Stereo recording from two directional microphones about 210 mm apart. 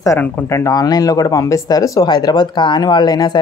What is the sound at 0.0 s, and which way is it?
Speech, 10° left (ahead or behind).